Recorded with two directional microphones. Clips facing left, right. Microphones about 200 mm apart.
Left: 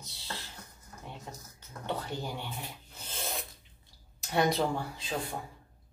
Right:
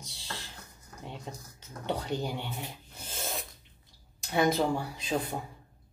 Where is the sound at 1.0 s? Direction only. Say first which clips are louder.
Right 3 dB; 15° right (ahead or behind).